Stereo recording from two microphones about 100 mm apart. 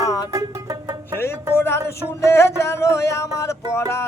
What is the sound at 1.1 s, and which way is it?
Music, 25° left (ahead or behind).